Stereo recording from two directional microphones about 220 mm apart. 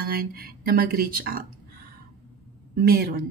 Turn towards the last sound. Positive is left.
turn(degrees=-45)  # may be behind; listen again after turning